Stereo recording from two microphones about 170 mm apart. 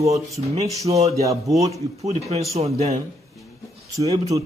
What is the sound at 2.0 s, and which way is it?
A man's voice, 40° right (ahead or behind).